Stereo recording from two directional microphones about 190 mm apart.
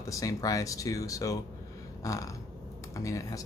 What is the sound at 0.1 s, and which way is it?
Speech, 15° left (ahead or behind).